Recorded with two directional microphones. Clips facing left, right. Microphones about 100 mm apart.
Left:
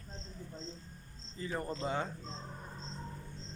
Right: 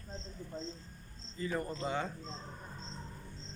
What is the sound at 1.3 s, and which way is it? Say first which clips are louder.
Speech: right 1 dB; 30° left (ahead or behind).